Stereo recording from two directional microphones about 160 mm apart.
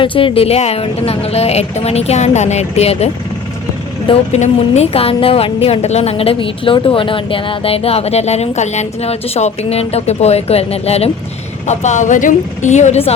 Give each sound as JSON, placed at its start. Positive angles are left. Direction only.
{"t": 0.0, "sound": "speech", "side_deg": 30}
{"t": 4.1, "sound": "speech", "side_deg": 45}